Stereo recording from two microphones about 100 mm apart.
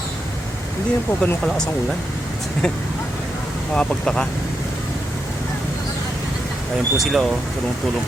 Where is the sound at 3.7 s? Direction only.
10° left (ahead or behind).